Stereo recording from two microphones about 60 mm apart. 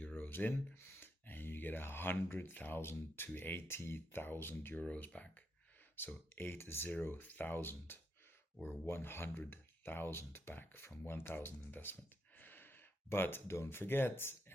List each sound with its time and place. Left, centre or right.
0.0 s speech: left
4.8 s speech: left